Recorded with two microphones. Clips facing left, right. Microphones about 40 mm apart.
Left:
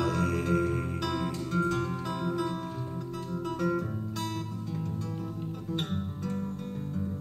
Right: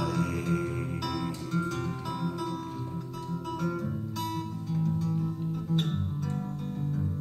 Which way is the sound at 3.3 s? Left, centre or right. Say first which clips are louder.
Left 3 dB; centre.